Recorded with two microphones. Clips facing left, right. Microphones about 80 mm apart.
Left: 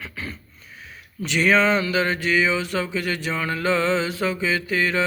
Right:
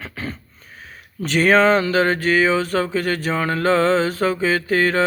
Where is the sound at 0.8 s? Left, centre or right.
Right.